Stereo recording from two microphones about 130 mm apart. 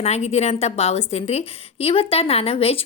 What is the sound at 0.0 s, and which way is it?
A woman's voice, 55° left (ahead or behind).